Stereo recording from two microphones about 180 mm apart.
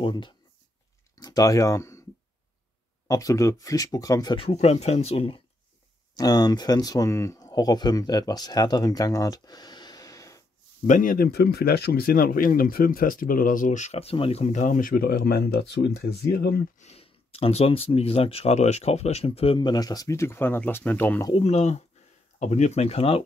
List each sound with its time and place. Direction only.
0.0 s speech: 25° left (ahead or behind)
3.1 s speech: 20° left (ahead or behind)
6.1 s speech: 20° left (ahead or behind)
10.9 s speech: 50° left (ahead or behind)
16.7 s speech: 35° left (ahead or behind); by 21.3 s 10° left (ahead or behind)
21.3 s speech: 35° left (ahead or behind)